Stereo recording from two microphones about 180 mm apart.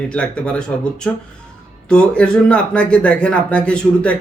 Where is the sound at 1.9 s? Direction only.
5° left (ahead or behind).